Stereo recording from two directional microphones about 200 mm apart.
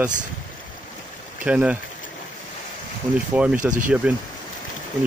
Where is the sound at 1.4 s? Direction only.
5° right (ahead or behind).